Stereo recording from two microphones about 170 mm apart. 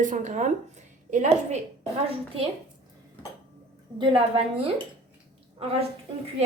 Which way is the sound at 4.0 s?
30° right (ahead or behind).